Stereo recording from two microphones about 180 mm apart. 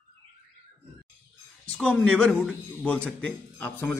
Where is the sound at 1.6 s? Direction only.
5° left (ahead or behind).